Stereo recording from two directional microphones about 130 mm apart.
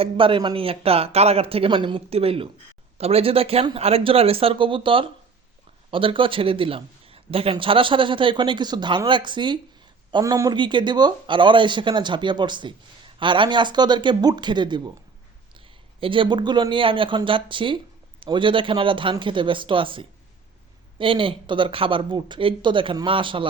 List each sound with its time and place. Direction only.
0.0 s a man's voice: 40° right (ahead or behind); by 10.5 s 25° right (ahead or behind)
10.5 s speech: 35° right (ahead or behind)